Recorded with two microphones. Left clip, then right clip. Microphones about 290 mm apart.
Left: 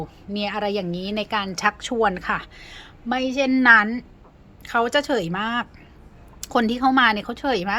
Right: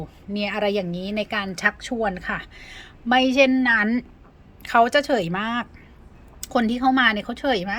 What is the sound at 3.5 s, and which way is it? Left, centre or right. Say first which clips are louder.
Speech: left 5 dB; centre.